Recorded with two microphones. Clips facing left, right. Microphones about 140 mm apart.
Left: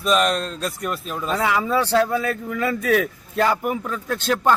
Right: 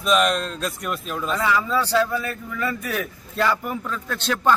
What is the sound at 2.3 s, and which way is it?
Speech, 80° left.